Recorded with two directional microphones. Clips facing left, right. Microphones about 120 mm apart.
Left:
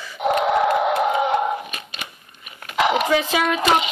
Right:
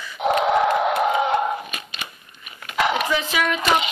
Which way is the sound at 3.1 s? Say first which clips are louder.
Left 3 dB; 45° left (ahead or behind).